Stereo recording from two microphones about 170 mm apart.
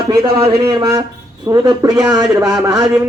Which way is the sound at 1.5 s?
20° right (ahead or behind).